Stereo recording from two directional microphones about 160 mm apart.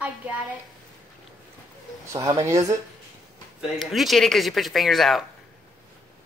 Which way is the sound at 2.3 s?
20° right (ahead or behind).